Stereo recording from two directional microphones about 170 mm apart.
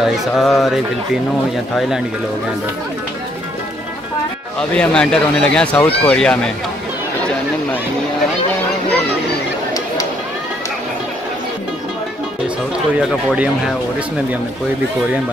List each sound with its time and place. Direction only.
0.0 s speech: centre (ahead or behind)
4.6 s speech: 5° left (ahead or behind)
13.0 s speech: centre (ahead or behind)